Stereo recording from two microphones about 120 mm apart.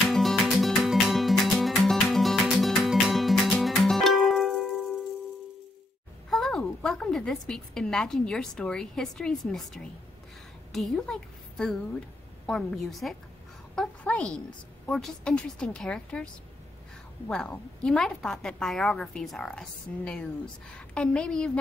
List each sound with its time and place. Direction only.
0.1 s music: centre (ahead or behind)
6.3 s a woman's voice: 5° left (ahead or behind)
17.3 s a woman's voice: 5° left (ahead or behind)
19.9 s speech: 15° left (ahead or behind)